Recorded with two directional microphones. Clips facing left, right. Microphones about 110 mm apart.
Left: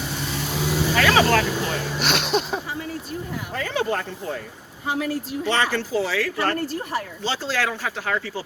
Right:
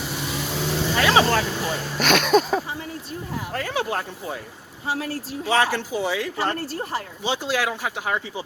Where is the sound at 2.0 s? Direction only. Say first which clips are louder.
Right 6 dB; 50° right (ahead or behind).